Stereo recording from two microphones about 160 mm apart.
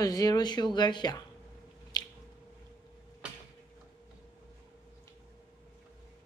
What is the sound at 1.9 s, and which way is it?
Squish, 25° left (ahead or behind).